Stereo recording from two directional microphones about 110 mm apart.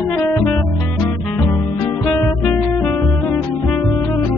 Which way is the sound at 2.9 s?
20° left (ahead or behind).